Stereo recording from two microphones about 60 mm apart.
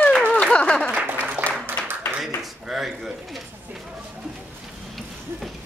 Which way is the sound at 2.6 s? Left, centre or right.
Centre.